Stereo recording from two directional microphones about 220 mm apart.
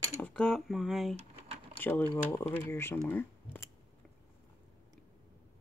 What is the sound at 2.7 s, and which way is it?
Speech, 10° left (ahead or behind).